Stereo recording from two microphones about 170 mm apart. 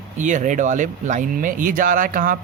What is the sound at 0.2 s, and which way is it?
Speech, 45° right (ahead or behind).